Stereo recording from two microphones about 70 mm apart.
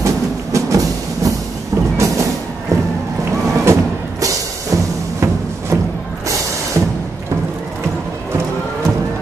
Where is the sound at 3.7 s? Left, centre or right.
Right.